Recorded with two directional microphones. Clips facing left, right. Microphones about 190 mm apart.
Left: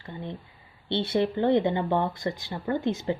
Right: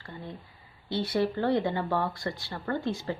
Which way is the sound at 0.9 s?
25° left (ahead or behind).